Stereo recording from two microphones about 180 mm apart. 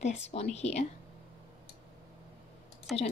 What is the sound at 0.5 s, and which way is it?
Speech, 40° left (ahead or behind).